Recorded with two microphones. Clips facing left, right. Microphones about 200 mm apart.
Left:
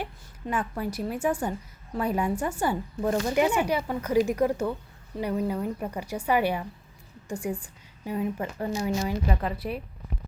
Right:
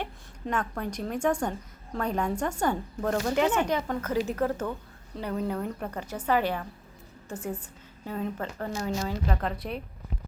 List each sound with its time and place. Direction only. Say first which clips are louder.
0.0 s a woman's voice: even; 5° left (ahead or behind)